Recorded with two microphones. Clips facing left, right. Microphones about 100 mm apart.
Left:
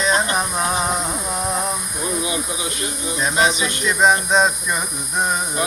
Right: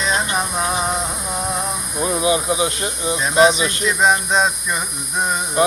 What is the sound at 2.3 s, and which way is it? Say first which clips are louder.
Speech: right 7 dB; 35° right (ahead or behind).